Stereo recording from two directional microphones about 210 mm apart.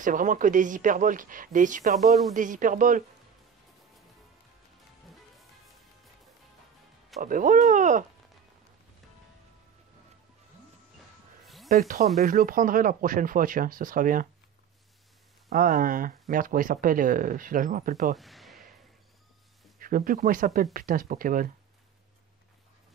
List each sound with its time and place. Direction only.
0.0 s speech: 40° right (ahead or behind)
7.2 s speech: 40° right (ahead or behind)
11.4 s snake: centre (ahead or behind)
12.2 s speech: 40° right (ahead or behind)
15.5 s speech: 40° right (ahead or behind)
18.1 s a sound: centre (ahead or behind)
19.8 s speech: 40° right (ahead or behind)